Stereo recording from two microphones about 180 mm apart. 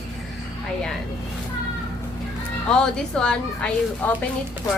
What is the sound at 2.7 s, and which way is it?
A woman's voice, 5° left (ahead or behind).